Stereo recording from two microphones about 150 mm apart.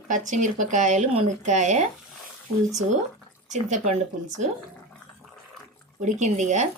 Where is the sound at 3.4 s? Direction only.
50° right (ahead or behind).